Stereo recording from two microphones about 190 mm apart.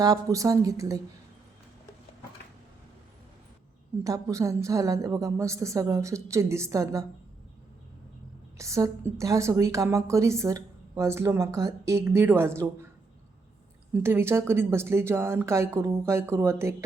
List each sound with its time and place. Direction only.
0.0 s a woman's voice: 20° right (ahead or behind)
4.0 s a woman's voice: 15° right (ahead or behind)
8.5 s a woman's voice: 15° right (ahead or behind)
13.9 s a woman's voice: 10° right (ahead or behind)